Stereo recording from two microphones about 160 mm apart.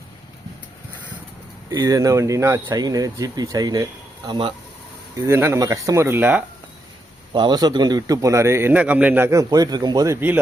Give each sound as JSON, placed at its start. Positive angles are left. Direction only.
{"t": 1.7, "sound": "a man's voice", "side_deg": -20}
{"t": 5.1, "sound": "speech", "side_deg": -15}
{"t": 7.3, "sound": "a man's voice", "side_deg": -25}
{"t": 10.2, "sound": "speech", "side_deg": -10}